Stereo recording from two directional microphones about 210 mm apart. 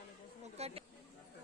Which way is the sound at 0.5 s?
30° right (ahead or behind).